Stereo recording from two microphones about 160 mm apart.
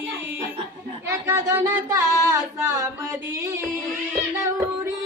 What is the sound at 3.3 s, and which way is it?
Music, 20° right (ahead or behind).